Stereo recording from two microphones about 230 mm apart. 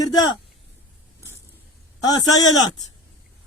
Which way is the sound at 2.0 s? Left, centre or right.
Centre.